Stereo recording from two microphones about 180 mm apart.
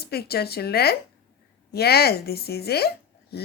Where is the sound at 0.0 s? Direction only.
60° left (ahead or behind).